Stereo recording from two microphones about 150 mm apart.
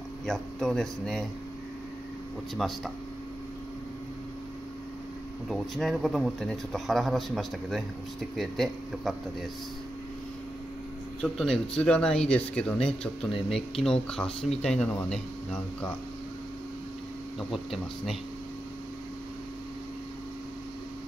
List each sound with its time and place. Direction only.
0.3 s speech: centre (ahead or behind)
2.5 s speech: centre (ahead or behind)
5.5 s speech: centre (ahead or behind)
11.1 s speech: 5° left (ahead or behind)
17.4 s speech: centre (ahead or behind)